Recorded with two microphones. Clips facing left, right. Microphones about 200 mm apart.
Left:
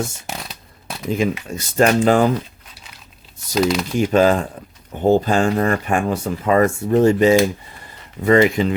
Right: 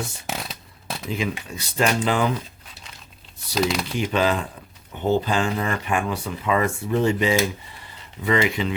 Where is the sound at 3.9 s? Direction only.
45° left (ahead or behind).